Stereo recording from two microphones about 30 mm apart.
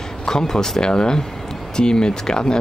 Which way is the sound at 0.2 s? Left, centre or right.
Left.